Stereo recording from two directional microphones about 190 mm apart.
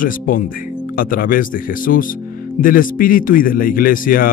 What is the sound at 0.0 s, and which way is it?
Speech, 45° left (ahead or behind).